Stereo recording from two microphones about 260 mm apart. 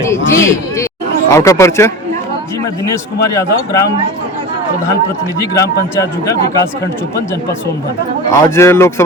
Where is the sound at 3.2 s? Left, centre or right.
Centre.